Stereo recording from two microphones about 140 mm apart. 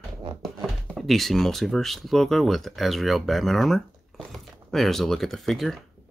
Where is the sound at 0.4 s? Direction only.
Centre (ahead or behind).